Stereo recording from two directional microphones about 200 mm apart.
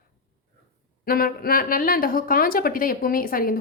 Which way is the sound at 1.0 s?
45° left (ahead or behind).